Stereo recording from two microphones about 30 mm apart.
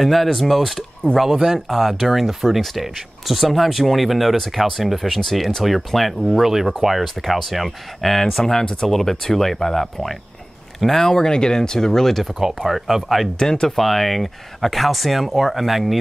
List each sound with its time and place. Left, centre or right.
0.0 s speech: centre
1.2 s speech: centre
12.5 s speech: centre
13.4 s speech: left
13.7 s speech: centre